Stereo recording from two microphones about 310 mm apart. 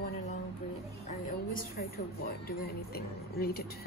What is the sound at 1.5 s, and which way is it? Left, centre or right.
Speech, left.